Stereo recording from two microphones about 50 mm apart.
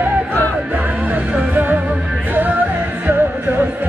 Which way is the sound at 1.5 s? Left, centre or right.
Right.